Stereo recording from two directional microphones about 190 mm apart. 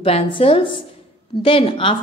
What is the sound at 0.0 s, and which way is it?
A woman's voice, 30° left (ahead or behind).